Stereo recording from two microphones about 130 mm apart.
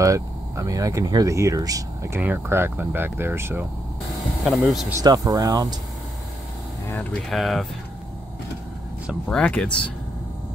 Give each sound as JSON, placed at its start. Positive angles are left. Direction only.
{"t": 0.0, "sound": "speech", "side_deg": -25}
{"t": 5.0, "sound": "speech", "side_deg": -30}
{"t": 7.2, "sound": "speech", "side_deg": 0}
{"t": 9.3, "sound": "speech", "side_deg": 10}